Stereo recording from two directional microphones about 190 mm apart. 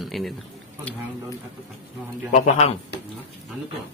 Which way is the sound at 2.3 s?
35° left (ahead or behind).